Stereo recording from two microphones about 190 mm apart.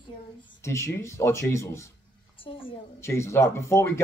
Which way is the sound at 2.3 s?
30° left (ahead or behind).